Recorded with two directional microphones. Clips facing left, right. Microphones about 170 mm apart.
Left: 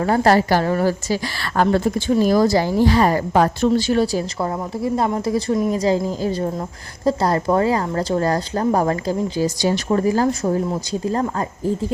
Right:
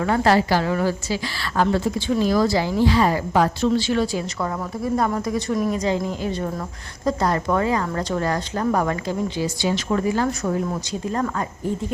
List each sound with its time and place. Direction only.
0.0 s a woman's voice: 40° left (ahead or behind)
4.4 s speech: 25° left (ahead or behind)